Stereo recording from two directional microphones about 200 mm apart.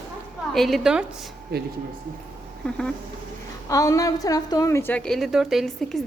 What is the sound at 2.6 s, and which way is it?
Speech, 5° left (ahead or behind).